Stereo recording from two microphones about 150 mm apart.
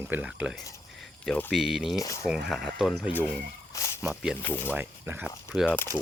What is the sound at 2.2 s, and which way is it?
Speech, 5° right (ahead or behind).